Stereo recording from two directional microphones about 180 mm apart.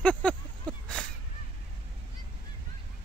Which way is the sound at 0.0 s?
5° left (ahead or behind).